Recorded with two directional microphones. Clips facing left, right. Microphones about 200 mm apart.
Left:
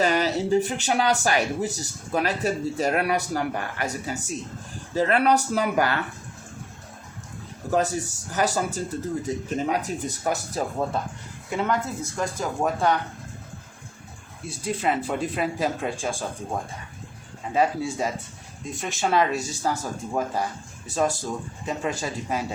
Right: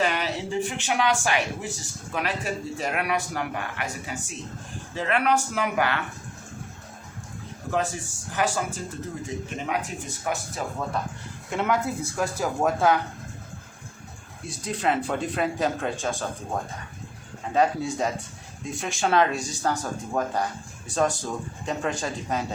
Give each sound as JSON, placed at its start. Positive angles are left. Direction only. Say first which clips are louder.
{"t": 0.0, "sound": "speech", "louder": "left 4 dB", "side_deg": 40}
{"t": 7.7, "sound": "speech", "louder": "left 4 dB", "side_deg": 40}
{"t": 11.5, "sound": "speech", "louder": "even", "side_deg": -5}
{"t": 14.4, "sound": "speech", "louder": "left 1 dB", "side_deg": 5}
{"t": 17.5, "sound": "speech", "louder": "even", "side_deg": 5}